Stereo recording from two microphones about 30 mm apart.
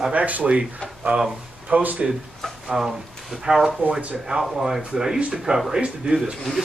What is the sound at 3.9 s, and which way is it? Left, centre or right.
Speech, right.